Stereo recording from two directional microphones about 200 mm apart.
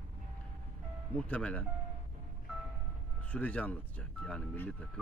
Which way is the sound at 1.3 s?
5° left (ahead or behind).